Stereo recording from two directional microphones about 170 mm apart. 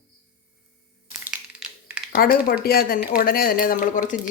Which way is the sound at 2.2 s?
60° left (ahead or behind).